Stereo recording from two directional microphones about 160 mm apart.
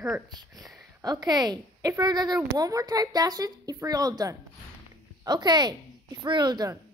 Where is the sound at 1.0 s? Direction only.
25° right (ahead or behind).